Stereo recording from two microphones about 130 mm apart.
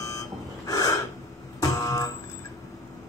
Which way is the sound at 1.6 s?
30° left (ahead or behind).